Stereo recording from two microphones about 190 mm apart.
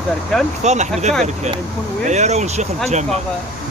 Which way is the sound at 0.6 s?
35° right (ahead or behind).